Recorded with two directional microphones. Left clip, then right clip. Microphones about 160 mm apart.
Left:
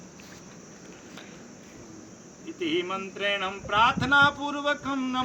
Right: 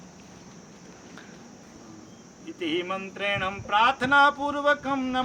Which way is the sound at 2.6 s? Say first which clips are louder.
Even; 25° right (ahead or behind).